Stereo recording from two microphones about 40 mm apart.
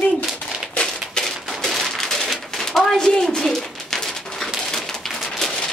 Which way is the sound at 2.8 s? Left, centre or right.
Centre.